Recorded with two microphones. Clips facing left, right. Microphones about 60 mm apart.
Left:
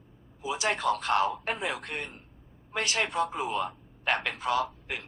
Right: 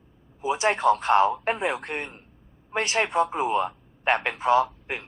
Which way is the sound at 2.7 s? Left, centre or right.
Right.